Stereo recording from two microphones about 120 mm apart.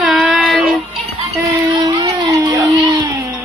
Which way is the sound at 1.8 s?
35° right (ahead or behind).